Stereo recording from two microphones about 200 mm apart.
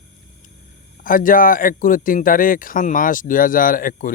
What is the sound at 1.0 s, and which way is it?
Speech, 45° left (ahead or behind).